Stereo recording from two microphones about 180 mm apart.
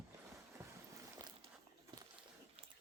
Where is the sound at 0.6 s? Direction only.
15° right (ahead or behind).